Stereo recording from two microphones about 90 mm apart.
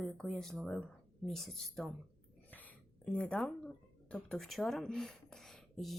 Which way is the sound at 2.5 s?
15° left (ahead or behind).